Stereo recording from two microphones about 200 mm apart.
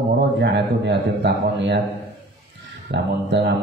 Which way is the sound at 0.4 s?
60° right (ahead or behind).